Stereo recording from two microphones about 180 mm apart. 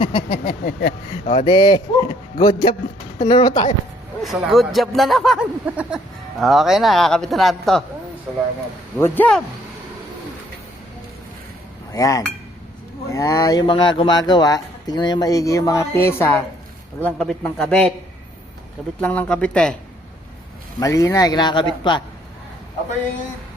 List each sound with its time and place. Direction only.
0.0 s a sound: 30° left (ahead or behind)
0.6 s speech: 55° left (ahead or behind)
1.3 s speech: 30° left (ahead or behind)
4.2 s speech: centre (ahead or behind)
9.0 s speech: 10° left (ahead or behind)
11.9 s cutlery: 20° left (ahead or behind)
13.1 s speech: 20° left (ahead or behind)
18.9 s speech: 10° left (ahead or behind)
20.7 s speech: 20° left (ahead or behind)